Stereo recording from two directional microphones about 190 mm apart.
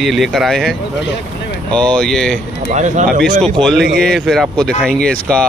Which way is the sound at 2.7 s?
40° right (ahead or behind).